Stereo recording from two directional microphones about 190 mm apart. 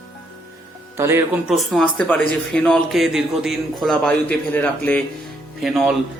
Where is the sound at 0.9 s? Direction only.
15° right (ahead or behind).